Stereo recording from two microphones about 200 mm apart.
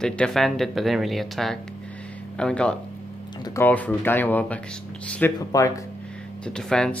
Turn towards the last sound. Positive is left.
turn(degrees=5)  # may be behind; listen again after turning